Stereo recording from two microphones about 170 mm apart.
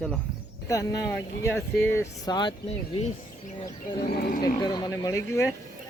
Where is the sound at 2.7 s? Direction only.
35° left (ahead or behind).